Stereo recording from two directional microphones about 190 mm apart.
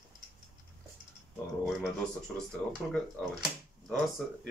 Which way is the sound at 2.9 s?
Centre (ahead or behind).